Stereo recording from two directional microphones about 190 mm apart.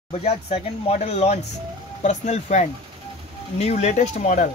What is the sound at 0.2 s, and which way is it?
Speech, 35° left (ahead or behind).